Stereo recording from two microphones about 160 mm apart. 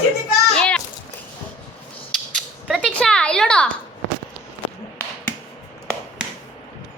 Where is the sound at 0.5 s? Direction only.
5° left (ahead or behind).